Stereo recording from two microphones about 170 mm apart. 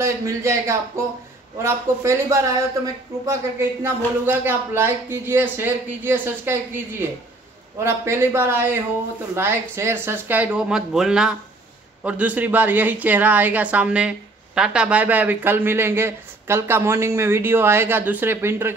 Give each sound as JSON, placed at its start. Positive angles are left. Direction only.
{"t": 0.0, "sound": "a woman's voice", "side_deg": -15}